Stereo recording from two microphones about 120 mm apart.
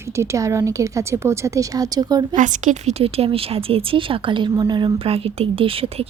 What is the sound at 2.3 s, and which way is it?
Speech, 90° right.